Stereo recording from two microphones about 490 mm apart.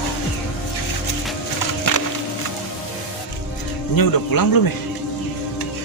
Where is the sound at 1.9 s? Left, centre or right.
Left.